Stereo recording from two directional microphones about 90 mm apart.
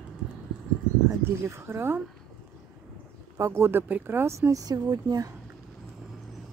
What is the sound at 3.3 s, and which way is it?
Speech, 30° right (ahead or behind).